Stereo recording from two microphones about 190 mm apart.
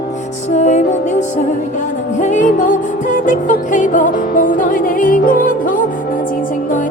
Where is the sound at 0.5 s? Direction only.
40° left (ahead or behind).